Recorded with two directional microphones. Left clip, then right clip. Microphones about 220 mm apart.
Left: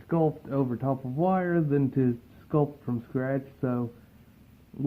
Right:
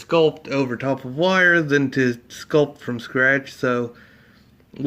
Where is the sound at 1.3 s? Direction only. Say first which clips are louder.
Right 12 dB; 10° right (ahead or behind).